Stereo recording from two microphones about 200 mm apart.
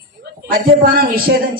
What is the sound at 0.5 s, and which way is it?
Speech, 45° right (ahead or behind).